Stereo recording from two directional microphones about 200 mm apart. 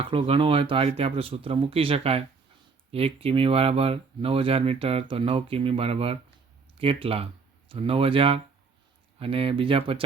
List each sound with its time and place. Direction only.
0.0 s speech: 30° right (ahead or behind)